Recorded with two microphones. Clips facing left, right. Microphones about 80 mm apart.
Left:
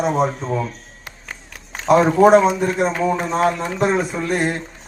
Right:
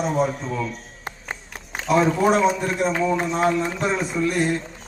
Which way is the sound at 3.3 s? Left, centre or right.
Left.